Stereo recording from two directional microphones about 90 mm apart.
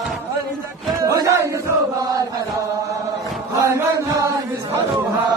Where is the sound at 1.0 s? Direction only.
40° right (ahead or behind).